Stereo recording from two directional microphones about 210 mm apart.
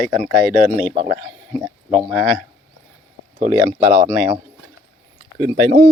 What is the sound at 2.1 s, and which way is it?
Speech, 5° left (ahead or behind).